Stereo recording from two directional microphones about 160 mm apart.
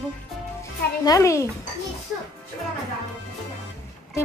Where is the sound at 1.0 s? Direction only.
20° left (ahead or behind).